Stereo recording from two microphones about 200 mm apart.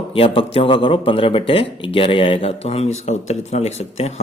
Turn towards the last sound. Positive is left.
turn(degrees=35)  # may be behind; listen again after turning